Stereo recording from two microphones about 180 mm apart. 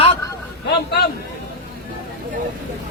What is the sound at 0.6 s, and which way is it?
Speech, 65° left (ahead or behind).